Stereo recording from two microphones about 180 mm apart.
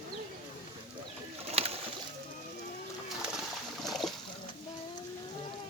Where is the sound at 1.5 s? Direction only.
35° right (ahead or behind).